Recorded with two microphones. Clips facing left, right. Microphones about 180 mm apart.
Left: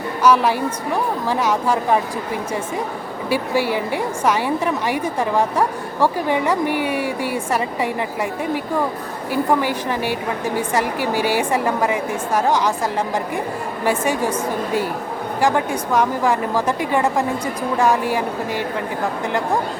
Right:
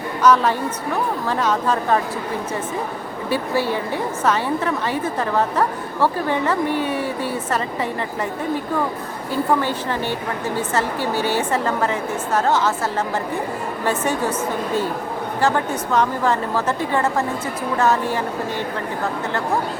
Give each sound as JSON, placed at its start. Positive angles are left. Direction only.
{"t": 0.2, "sound": "a woman's voice", "side_deg": 10}
{"t": 3.2, "sound": "a woman's voice", "side_deg": 10}
{"t": 13.8, "sound": "a woman's voice", "side_deg": 10}